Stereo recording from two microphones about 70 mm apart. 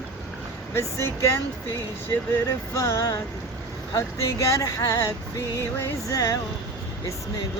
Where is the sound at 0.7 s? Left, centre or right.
Left.